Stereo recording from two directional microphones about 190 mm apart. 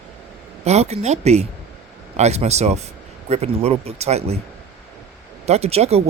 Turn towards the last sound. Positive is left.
turn(degrees=-35)  # may be behind; listen again after turning